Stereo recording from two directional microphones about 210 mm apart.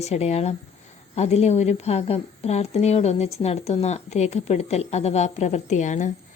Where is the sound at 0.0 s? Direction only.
30° left (ahead or behind).